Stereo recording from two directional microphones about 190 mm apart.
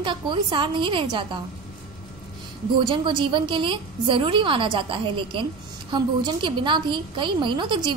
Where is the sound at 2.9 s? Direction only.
25° right (ahead or behind).